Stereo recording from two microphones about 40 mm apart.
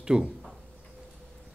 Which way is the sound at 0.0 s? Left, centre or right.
Centre.